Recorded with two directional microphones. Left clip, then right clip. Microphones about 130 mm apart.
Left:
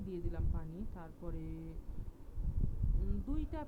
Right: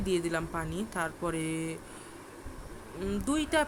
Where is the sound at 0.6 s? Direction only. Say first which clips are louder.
Right 17 dB; 35° right (ahead or behind).